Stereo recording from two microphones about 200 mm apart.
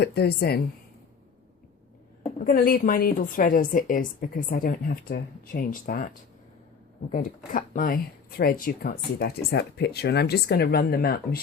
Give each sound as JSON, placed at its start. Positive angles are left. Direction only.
{"t": 0.0, "sound": "speech", "side_deg": 55}
{"t": 2.4, "sound": "speech", "side_deg": 45}